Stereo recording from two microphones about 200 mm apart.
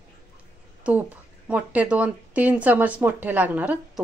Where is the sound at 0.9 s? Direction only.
5° right (ahead or behind).